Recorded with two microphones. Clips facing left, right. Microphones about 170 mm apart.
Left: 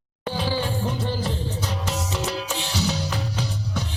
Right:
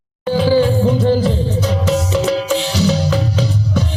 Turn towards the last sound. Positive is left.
turn(degrees=-90)